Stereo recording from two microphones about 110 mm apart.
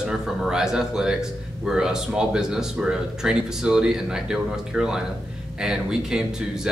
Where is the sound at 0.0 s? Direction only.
5° right (ahead or behind).